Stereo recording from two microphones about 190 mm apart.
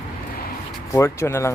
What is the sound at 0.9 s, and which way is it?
Speech, 15° left (ahead or behind).